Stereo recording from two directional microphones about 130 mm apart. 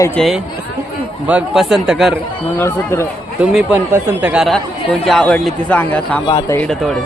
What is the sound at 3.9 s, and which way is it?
Speech, 10° right (ahead or behind).